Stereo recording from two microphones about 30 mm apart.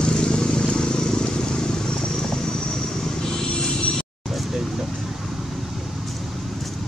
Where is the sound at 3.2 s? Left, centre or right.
Left.